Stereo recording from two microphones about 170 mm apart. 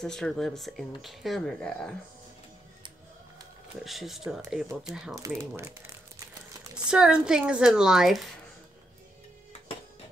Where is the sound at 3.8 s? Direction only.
Centre (ahead or behind).